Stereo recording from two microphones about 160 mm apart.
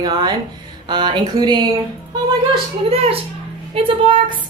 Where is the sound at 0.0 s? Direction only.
25° right (ahead or behind).